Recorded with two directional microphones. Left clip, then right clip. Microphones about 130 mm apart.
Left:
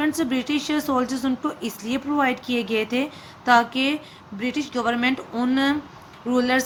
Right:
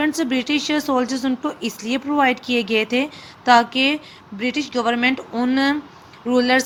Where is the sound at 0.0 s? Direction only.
25° right (ahead or behind).